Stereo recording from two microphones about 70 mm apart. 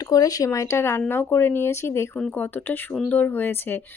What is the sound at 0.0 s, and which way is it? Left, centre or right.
Speech, left.